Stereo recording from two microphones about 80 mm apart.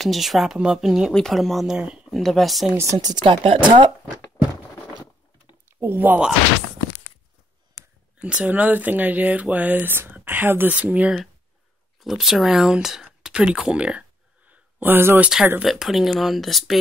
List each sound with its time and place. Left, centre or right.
0.0 s speech: centre
2.0 s speech: centre
3.0 s speech: right
3.3 s speech: right
5.8 s speech: right
8.2 s speech: centre
12.0 s speech: centre; by 15.1 s right
15.1 s speech: centre